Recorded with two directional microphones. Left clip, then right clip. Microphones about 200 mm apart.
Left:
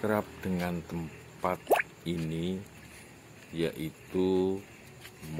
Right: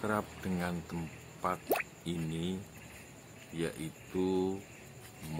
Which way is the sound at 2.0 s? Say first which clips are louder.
Left 4 dB; 15° left (ahead or behind).